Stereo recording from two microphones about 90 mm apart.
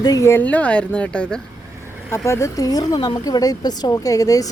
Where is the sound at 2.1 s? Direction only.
30° left (ahead or behind).